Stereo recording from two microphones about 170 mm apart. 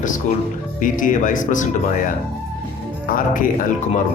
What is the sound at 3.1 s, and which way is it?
Speech, 55° left (ahead or behind).